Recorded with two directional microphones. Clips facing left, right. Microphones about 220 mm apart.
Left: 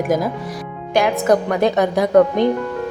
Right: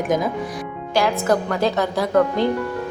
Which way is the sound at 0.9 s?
20° left (ahead or behind).